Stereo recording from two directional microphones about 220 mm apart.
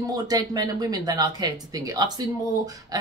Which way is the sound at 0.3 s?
15° right (ahead or behind).